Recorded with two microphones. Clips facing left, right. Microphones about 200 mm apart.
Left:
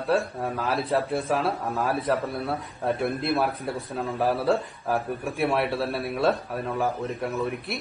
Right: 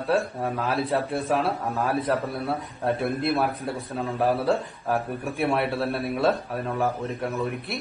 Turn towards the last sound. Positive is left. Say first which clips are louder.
# even
turn(degrees=0)  # may be behind; listen again after turning